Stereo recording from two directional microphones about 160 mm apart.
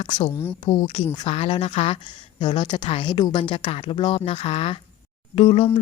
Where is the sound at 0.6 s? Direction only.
35° left (ahead or behind).